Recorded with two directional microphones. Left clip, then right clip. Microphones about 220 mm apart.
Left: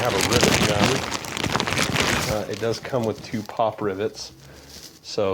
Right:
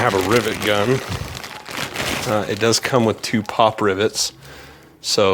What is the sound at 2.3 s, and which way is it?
Speech, 55° right (ahead or behind).